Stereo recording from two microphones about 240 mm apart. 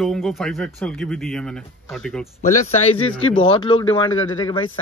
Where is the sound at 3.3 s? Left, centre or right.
Left.